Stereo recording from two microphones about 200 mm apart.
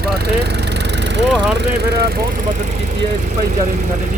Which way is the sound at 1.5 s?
55° right (ahead or behind).